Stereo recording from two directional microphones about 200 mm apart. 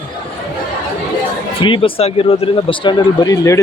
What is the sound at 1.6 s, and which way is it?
Speech, 25° left (ahead or behind).